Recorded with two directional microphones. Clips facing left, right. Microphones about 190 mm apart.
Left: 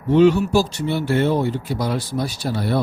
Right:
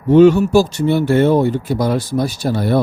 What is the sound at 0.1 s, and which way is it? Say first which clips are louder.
A man's voice: right 5 dB; 50° right (ahead or behind).